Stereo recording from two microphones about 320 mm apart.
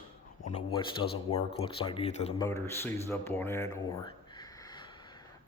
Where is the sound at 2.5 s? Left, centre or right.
Centre.